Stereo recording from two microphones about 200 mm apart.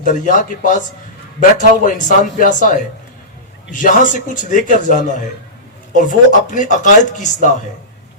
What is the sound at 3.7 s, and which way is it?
A man's voice, 40° left (ahead or behind).